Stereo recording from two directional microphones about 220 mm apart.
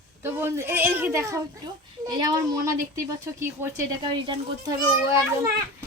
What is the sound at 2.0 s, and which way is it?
Speech, 15° right (ahead or behind).